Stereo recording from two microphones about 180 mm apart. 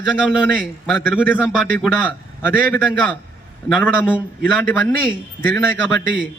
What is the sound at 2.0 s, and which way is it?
A man's voice, 10° left (ahead or behind).